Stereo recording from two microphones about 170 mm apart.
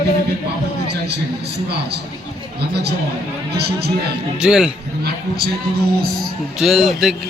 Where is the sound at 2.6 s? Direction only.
75° right (ahead or behind).